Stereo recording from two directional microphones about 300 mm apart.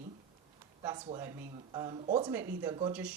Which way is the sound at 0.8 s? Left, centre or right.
Centre.